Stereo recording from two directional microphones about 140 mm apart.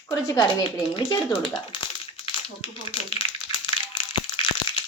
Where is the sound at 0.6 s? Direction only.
40° left (ahead or behind).